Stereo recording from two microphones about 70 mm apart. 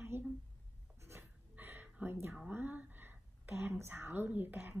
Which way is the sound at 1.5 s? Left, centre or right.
Right.